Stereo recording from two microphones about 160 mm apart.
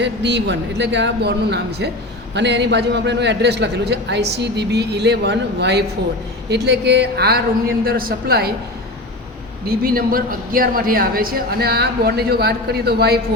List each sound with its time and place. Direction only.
0.0 s a man's voice: 90° right
7.9 s a woman's voice: 65° right (ahead or behind)
9.6 s a woman's voice: 65° right (ahead or behind); by 13.1 s 85° right